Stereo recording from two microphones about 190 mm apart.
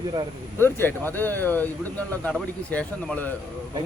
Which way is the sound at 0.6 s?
10° left (ahead or behind).